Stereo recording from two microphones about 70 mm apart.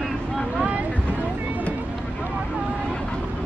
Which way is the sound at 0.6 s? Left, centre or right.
Right.